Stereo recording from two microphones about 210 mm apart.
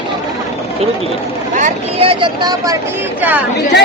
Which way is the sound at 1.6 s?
25° right (ahead or behind).